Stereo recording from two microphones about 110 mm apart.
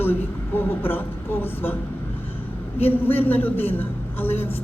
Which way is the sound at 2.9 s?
20° left (ahead or behind).